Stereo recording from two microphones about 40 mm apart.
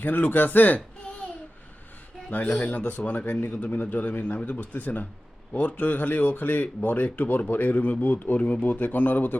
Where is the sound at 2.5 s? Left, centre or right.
Left.